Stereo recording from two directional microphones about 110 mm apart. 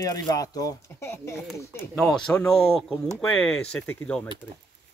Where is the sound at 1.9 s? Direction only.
5° left (ahead or behind).